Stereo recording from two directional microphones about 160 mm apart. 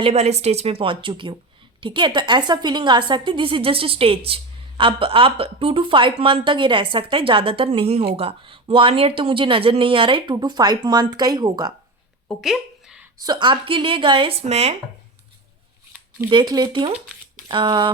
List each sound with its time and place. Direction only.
0.0 s a woman's voice: 40° right (ahead or behind); by 11.7 s 25° right (ahead or behind)
12.3 s a sound: centre (ahead or behind)
13.2 s a woman's voice: 30° right (ahead or behind)
14.4 s speech: 45° right (ahead or behind)
16.3 s a woman's voice: 25° right (ahead or behind)